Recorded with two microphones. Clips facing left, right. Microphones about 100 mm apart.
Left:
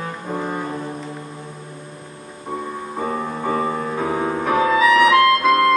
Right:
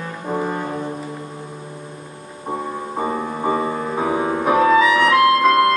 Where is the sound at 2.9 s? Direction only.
15° right (ahead or behind).